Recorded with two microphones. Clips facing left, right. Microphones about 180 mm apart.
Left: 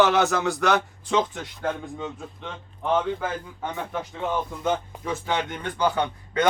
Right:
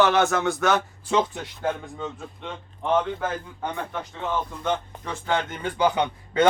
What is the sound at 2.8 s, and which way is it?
A man's voice, 5° left (ahead or behind).